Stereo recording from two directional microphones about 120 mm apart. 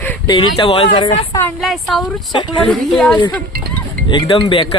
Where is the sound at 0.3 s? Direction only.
45° left (ahead or behind).